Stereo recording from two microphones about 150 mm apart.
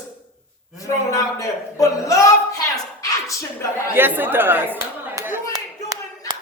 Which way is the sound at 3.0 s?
20° left (ahead or behind).